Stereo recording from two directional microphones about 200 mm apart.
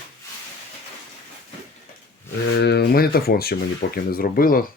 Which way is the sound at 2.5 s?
55° left (ahead or behind).